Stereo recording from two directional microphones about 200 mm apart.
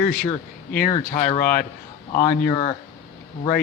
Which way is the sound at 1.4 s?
45° left (ahead or behind).